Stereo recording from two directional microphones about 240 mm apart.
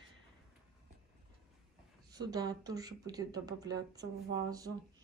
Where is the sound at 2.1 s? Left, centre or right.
Centre.